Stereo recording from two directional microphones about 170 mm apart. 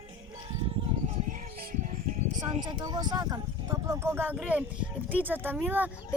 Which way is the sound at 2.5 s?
25° right (ahead or behind).